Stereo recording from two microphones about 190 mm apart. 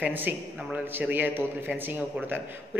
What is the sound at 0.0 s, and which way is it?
A man's voice, 10° right (ahead or behind).